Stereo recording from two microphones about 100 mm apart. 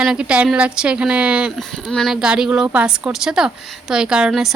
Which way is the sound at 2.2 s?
10° right (ahead or behind).